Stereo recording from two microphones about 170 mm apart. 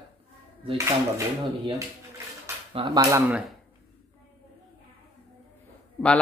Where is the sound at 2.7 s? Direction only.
25° right (ahead or behind).